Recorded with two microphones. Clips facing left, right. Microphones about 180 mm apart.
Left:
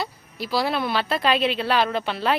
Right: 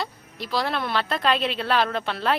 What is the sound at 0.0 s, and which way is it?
A woman's voice, 5° left (ahead or behind).